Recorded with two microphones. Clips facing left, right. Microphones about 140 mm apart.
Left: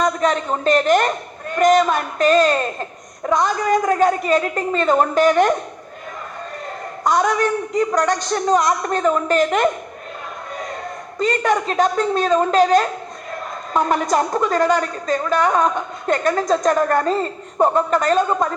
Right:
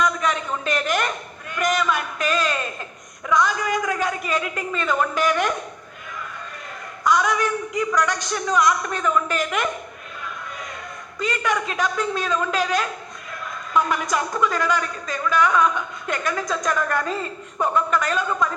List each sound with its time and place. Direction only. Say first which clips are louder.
0.0 s a woman's voice: left 4 dB; 40° left (ahead or behind)
7.1 s a woman's voice: left 3 dB; 35° left (ahead or behind)
11.2 s a woman's voice: left 6 dB; 40° left (ahead or behind)